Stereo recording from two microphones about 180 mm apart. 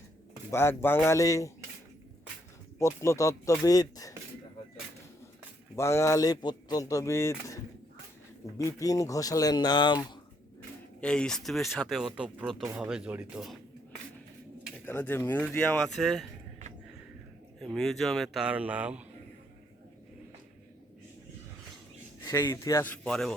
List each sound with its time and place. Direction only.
0.5 s speech: 15° left (ahead or behind)
2.7 s speech: 15° left (ahead or behind)
5.7 s speech: 15° left (ahead or behind)
11.0 s speech: 5° left (ahead or behind)
14.8 s speech: 10° left (ahead or behind)
17.6 s speech: centre (ahead or behind)
22.2 s speech: 15° left (ahead or behind)